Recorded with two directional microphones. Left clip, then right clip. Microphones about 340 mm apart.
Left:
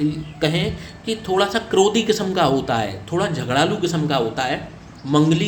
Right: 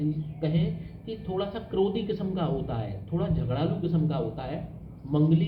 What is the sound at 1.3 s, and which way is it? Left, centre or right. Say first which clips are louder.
A man's voice: left 12 dB; left.